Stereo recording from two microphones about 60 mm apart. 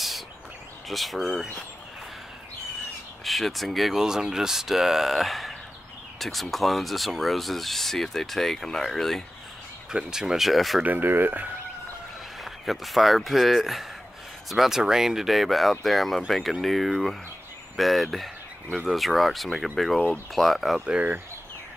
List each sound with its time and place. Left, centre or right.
0.8 s speech: centre
3.3 s speech: centre
9.8 s speech: centre
10.8 s speech: right
12.4 s speech: centre